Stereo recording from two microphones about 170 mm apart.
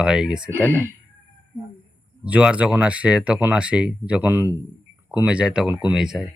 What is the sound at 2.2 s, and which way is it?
Speech, 5° right (ahead or behind).